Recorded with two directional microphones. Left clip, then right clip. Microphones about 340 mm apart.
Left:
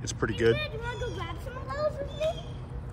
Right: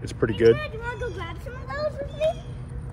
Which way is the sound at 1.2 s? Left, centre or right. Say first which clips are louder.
Right 2 dB; right.